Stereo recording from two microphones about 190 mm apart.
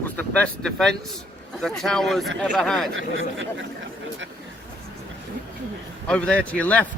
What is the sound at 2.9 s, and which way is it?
Speech, 85° right.